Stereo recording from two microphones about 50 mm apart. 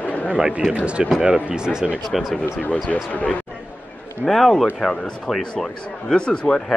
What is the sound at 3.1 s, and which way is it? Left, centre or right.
Speech, left.